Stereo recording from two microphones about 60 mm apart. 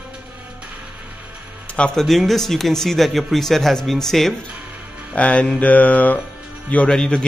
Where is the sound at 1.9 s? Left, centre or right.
Centre.